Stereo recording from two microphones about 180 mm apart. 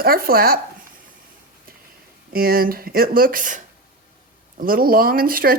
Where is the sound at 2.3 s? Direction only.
55° right (ahead or behind).